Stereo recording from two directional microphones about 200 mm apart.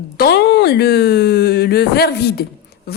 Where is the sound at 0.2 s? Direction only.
55° left (ahead or behind).